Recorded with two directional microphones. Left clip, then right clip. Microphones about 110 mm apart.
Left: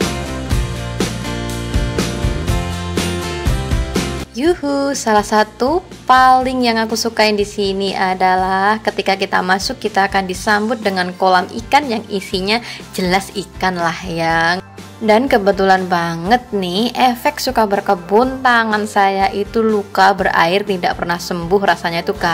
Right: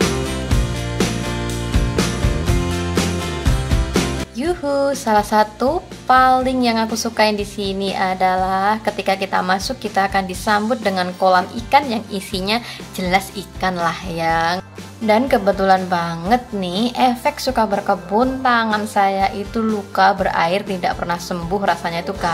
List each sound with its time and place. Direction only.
0.0 s music: centre (ahead or behind)
4.4 s a woman's voice: 35° left (ahead or behind)